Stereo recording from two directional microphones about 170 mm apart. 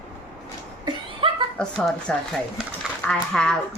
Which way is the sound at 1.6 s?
5° left (ahead or behind).